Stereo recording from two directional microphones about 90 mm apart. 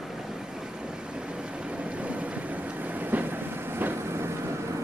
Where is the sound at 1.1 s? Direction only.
10° right (ahead or behind).